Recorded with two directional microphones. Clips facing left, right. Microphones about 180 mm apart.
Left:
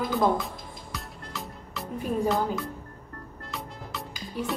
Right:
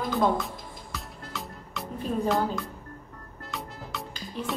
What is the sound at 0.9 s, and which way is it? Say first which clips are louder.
Music: even; centre (ahead or behind).